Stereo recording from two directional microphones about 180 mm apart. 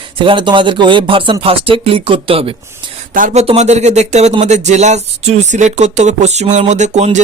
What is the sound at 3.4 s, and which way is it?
Speech, 35° right (ahead or behind).